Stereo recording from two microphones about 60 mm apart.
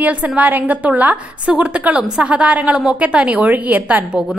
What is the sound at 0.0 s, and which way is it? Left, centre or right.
A woman's voice, right.